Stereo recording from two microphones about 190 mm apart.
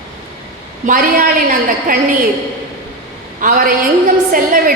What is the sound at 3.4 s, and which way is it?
A man's voice, 45° right (ahead or behind).